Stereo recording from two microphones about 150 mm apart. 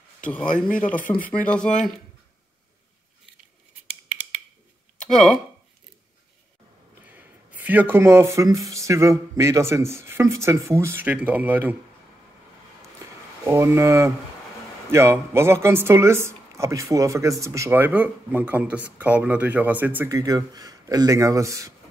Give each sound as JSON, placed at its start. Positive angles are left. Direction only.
{"t": 0.2, "sound": "a man's voice", "side_deg": 10}
{"t": 4.9, "sound": "speech", "side_deg": 5}
{"t": 7.0, "sound": "a sound", "side_deg": -10}
{"t": 8.6, "sound": "a woman's voice", "side_deg": -20}
{"t": 13.4, "sound": "a woman's voice", "side_deg": -15}
{"t": 20.2, "sound": "speech", "side_deg": -25}